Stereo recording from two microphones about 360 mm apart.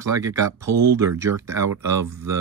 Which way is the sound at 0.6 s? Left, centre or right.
Right.